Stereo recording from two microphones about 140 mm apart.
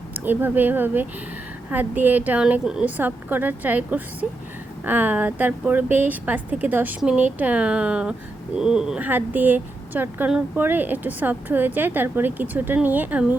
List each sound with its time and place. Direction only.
0.1 s speech: 15° right (ahead or behind)